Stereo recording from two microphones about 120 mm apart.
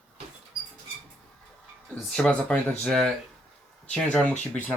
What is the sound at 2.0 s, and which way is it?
Speech, 10° left (ahead or behind).